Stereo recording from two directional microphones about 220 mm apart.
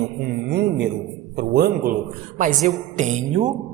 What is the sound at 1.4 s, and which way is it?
Speech, 45° right (ahead or behind).